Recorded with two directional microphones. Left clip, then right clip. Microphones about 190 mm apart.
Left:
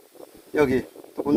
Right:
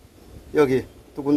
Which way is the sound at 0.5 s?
10° left (ahead or behind).